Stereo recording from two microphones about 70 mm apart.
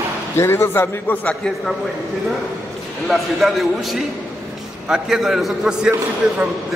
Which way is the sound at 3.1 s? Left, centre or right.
Centre.